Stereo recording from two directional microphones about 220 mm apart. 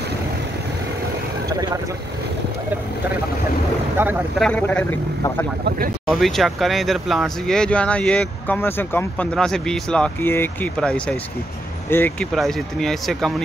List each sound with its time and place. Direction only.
1.5 s speech: 20° right (ahead or behind)
4.0 s speech: 10° right (ahead or behind)
4.4 s speech: 5° left (ahead or behind)